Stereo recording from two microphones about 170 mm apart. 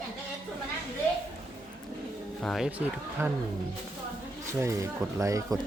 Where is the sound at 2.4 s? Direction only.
Centre (ahead or behind).